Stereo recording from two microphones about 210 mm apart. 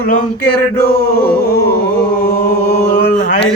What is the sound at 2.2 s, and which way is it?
Mantra, 45° left (ahead or behind).